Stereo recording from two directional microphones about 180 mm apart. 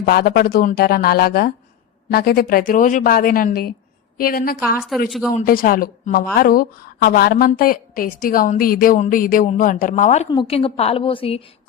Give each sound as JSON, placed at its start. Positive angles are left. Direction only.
{"t": 0.0, "sound": "a woman's voice", "side_deg": 60}
{"t": 5.0, "sound": "speech", "side_deg": 0}
{"t": 5.3, "sound": "a woman's voice", "side_deg": 50}
{"t": 10.2, "sound": "a woman's voice", "side_deg": 30}